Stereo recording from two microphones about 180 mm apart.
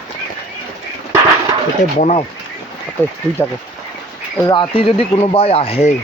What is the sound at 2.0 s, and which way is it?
Speech, 35° left (ahead or behind).